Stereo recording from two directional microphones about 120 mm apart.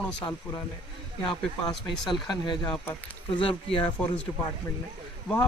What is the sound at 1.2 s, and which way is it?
Speech, 40° left (ahead or behind).